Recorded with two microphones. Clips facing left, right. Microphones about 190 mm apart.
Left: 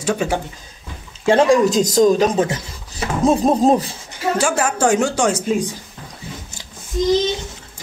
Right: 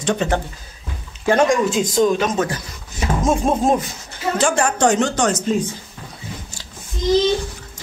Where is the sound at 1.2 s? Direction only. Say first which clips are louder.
Left 3 dB; 30° left (ahead or behind).